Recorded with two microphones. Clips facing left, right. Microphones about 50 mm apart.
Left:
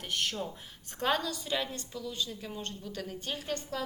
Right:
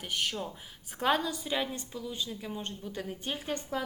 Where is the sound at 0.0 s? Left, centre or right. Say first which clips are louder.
Even; centre.